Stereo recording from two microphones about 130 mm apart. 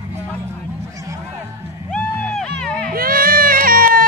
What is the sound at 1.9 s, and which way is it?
Music, 5° left (ahead or behind).